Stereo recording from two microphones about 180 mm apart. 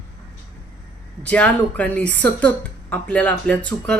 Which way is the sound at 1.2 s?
10° left (ahead or behind).